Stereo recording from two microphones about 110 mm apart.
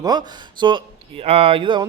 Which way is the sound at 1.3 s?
65° right (ahead or behind).